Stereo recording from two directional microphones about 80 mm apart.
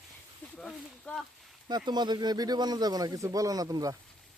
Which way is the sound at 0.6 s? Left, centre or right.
Centre.